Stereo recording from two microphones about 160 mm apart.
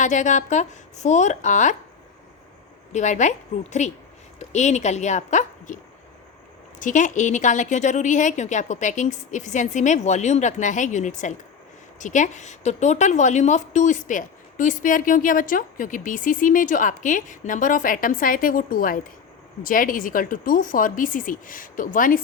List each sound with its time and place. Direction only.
0.0 s a woman's voice: 50° left (ahead or behind)
2.9 s a woman's voice: 50° left (ahead or behind)